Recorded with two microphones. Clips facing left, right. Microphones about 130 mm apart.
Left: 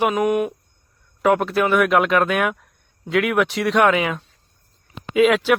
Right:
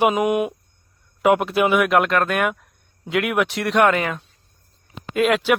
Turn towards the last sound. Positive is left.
turn(degrees=0)  # may be behind; listen again after turning